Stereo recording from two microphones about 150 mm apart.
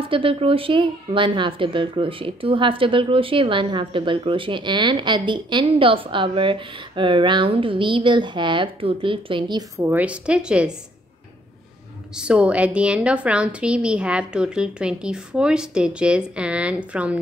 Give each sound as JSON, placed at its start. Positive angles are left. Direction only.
{"t": 0.0, "sound": "a woman's voice", "side_deg": -35}
{"t": 9.8, "sound": "a woman's voice", "side_deg": -10}
{"t": 12.2, "sound": "a woman's voice", "side_deg": -5}